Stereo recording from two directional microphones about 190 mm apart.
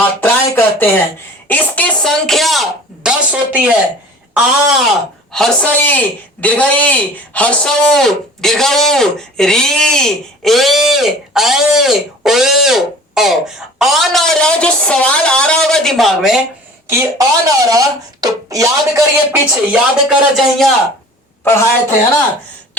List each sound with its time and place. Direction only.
0.0 s a sound: 10° left (ahead or behind)
1.5 s a man's voice: 10° left (ahead or behind); by 3.8 s 5° right (ahead or behind)
5.3 s a man's voice: 5° left (ahead or behind)
16.8 s speech: 10° right (ahead or behind)
21.4 s speech: 15° left (ahead or behind)